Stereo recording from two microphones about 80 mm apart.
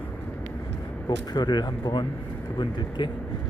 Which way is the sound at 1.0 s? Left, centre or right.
Left.